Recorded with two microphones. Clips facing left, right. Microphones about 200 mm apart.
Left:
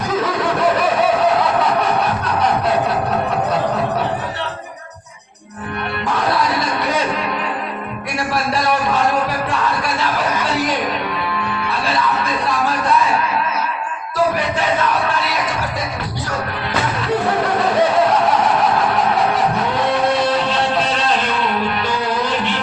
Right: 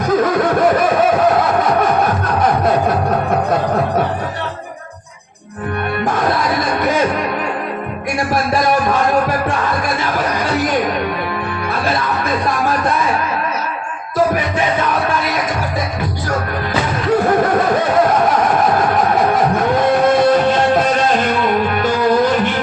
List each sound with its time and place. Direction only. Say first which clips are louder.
19.3 s music: right 4 dB; 45° right (ahead or behind)